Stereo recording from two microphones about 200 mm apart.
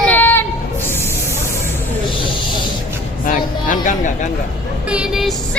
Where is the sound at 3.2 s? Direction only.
40° left (ahead or behind).